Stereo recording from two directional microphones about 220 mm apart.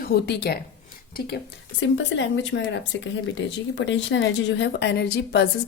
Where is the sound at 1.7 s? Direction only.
55° left (ahead or behind).